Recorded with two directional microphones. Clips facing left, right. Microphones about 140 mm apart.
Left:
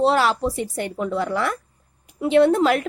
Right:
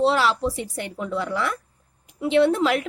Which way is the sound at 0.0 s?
45° left (ahead or behind).